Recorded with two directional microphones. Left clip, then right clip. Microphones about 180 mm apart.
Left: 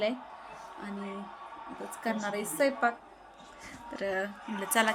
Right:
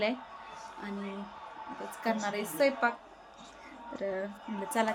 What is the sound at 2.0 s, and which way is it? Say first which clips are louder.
Speech: right 1 dB; centre (ahead or behind).